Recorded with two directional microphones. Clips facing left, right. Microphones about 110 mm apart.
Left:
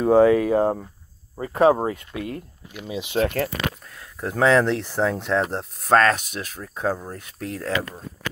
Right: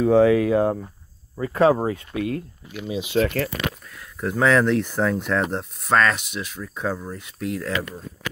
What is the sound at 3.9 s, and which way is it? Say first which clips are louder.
Speech: right 2 dB; 30° left (ahead or behind).